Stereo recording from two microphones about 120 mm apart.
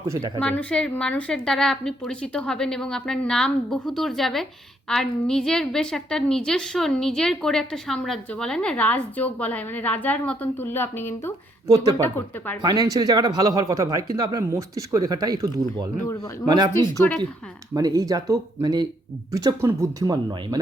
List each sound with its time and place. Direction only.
0.1 s a woman's voice: 30° right (ahead or behind)
0.3 s a woman's voice: 10° left (ahead or behind)
12.6 s speech: 30° right (ahead or behind)
16.7 s a woman's voice: 15° left (ahead or behind)
17.7 s speech: 30° right (ahead or behind)